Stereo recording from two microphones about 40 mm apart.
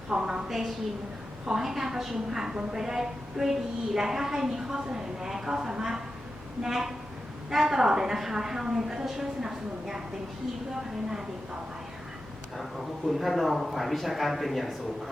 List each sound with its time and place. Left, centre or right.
0.1 s a woman's voice: right
0.4 s a man's voice: centre
13.1 s a man's voice: centre